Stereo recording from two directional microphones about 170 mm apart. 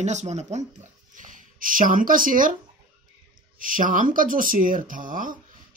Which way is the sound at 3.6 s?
55° right (ahead or behind).